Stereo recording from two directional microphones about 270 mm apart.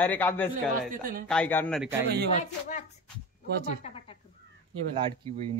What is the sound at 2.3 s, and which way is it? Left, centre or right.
Speech, left.